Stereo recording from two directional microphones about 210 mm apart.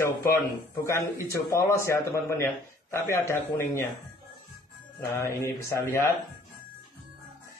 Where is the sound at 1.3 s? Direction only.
15° left (ahead or behind).